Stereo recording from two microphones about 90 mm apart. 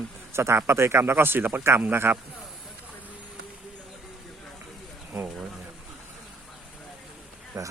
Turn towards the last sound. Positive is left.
turn(degrees=-40)  # may be behind; listen again after turning